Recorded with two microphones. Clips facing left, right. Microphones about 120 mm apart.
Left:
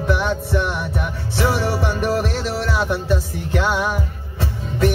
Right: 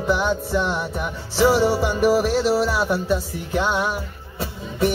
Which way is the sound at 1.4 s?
Centre (ahead or behind).